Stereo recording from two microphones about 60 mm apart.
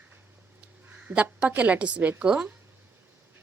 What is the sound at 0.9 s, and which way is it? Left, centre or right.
A woman's voice, right.